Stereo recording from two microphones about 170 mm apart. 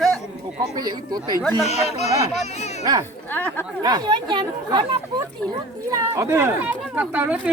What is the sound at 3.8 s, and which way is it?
Speech, 25° right (ahead or behind).